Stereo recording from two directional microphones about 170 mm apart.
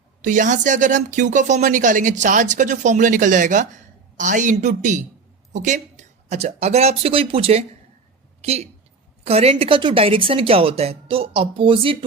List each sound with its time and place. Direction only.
0.2 s speech: 50° right (ahead or behind); by 12.0 s 30° right (ahead or behind)